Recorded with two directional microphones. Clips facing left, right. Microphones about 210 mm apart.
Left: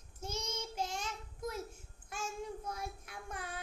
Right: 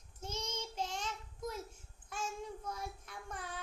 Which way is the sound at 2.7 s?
10° left (ahead or behind).